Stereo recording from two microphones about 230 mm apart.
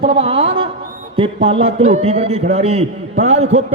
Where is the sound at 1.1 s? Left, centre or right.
Right.